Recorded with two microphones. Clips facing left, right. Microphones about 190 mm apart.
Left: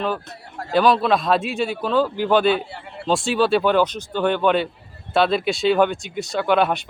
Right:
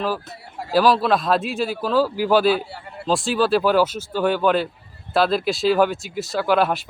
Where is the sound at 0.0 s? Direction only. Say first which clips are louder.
Even; 5° right (ahead or behind).